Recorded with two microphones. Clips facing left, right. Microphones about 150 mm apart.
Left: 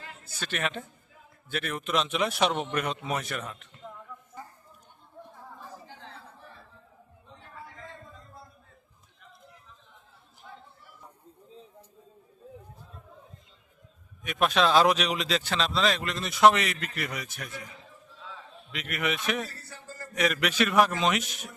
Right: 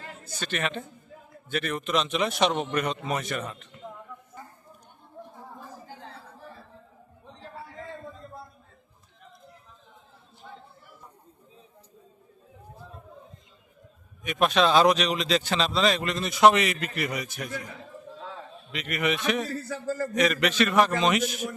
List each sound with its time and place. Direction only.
0.3 s speech: 5° left (ahead or behind)
14.3 s speech: centre (ahead or behind)
18.7 s speech: centre (ahead or behind)
19.6 s a man's voice: 90° right
20.1 s speech: 5° left (ahead or behind)